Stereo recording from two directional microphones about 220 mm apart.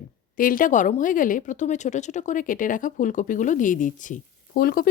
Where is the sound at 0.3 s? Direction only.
40° left (ahead or behind).